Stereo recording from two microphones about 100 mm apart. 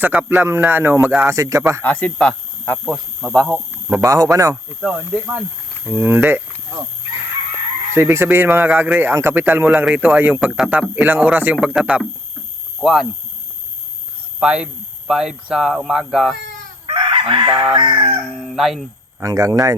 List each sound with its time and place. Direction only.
0.0 s speech: 15° right (ahead or behind)
1.8 s speech: 15° left (ahead or behind)
2.8 s speech: centre (ahead or behind)
4.0 s speech: 35° right (ahead or behind)
4.8 s speech: 5° right (ahead or behind)
5.9 s speech: 20° right (ahead or behind)
7.9 s speech: 25° right (ahead or behind); by 12.0 s 10° right (ahead or behind)
12.8 s speech: centre (ahead or behind)
14.3 s speech: 10° right (ahead or behind)
16.8 s chicken: 55° right (ahead or behind)
18.3 s speech: centre (ahead or behind)
19.2 s speech: 35° right (ahead or behind)